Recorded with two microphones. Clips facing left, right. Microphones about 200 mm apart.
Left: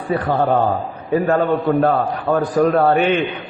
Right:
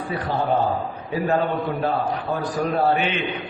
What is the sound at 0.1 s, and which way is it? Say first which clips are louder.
Speech: left 6 dB; 55° left (ahead or behind).